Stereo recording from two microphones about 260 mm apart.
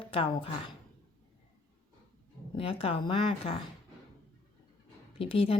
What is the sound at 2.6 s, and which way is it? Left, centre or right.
Speech, left.